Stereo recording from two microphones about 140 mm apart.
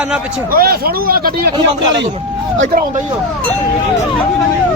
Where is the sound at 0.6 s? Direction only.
90° right.